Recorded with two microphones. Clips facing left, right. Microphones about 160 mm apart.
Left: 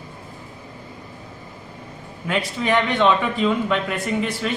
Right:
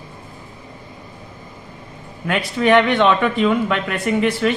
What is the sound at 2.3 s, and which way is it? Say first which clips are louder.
Speech: right 6 dB; 65° right (ahead or behind).